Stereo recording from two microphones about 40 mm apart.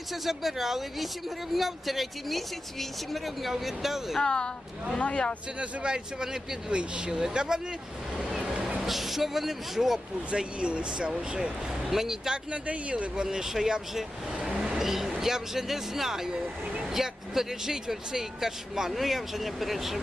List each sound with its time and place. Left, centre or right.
0.1 s speech: centre
4.2 s speech: left
5.5 s speech: right
8.2 s vehicle: centre
8.8 s speech: centre
10.3 s speech: right
11.1 s speech: centre
12.5 s speech: right
13.2 s speech: centre
14.6 s vehicle: centre
15.2 s speech: centre